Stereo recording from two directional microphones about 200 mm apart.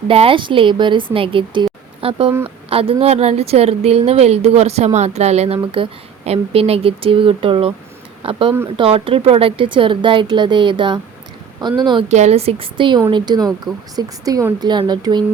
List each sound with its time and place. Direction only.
0.1 s speech: 25° right (ahead or behind)